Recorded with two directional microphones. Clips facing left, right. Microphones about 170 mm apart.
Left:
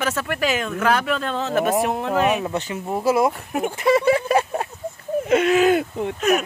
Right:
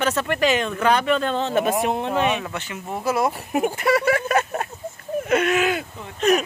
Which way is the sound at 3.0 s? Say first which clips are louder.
Left 3 dB; 25° left (ahead or behind).